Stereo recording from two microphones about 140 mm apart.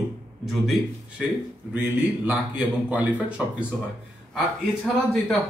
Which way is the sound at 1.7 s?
15° right (ahead or behind).